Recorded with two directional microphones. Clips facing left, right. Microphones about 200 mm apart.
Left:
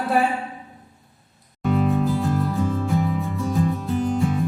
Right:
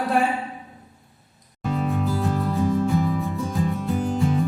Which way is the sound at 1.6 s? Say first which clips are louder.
Left 4 dB; centre (ahead or behind).